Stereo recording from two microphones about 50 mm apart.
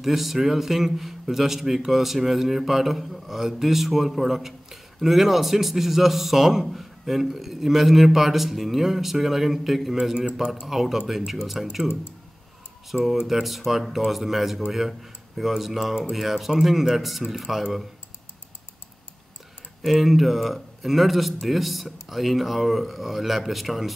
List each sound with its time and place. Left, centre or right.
0.0 s a man's voice: centre
12.9 s a man's voice: centre
19.8 s a man's voice: centre